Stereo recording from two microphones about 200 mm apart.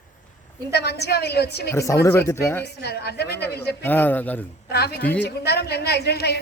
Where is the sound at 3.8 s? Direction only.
10° left (ahead or behind).